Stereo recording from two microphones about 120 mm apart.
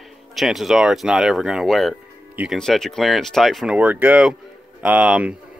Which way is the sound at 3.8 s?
15° right (ahead or behind).